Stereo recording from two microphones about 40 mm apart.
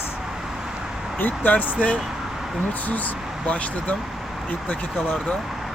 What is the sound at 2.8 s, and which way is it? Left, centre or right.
Speech, left.